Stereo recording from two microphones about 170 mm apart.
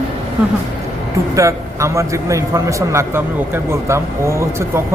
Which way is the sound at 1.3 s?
20° right (ahead or behind).